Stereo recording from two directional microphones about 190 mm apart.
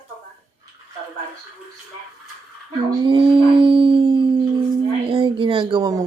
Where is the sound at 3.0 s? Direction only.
25° right (ahead or behind).